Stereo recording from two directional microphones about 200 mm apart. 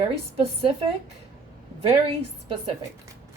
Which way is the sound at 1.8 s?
30° right (ahead or behind).